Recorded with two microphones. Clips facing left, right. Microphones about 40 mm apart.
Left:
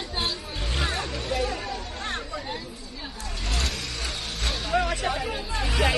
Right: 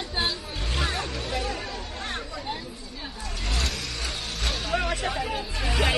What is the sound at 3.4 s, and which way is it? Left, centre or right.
Vehicle, right.